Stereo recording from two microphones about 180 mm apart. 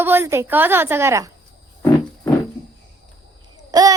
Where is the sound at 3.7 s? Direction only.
20° right (ahead or behind).